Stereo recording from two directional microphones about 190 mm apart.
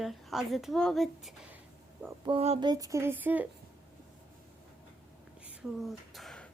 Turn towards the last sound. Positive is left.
turn(degrees=5)  # may be behind; listen again after turning